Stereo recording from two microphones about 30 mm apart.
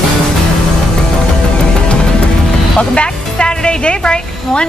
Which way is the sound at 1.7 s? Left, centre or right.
Left.